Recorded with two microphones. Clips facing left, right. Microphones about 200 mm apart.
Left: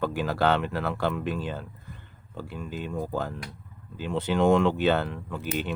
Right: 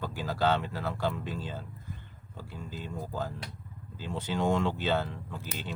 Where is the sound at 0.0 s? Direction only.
65° left (ahead or behind).